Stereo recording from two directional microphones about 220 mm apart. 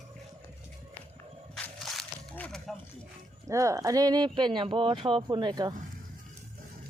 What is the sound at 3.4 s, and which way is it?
Speech, 15° right (ahead or behind).